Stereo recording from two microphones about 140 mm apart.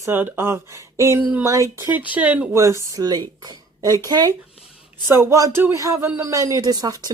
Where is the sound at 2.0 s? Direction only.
10° right (ahead or behind).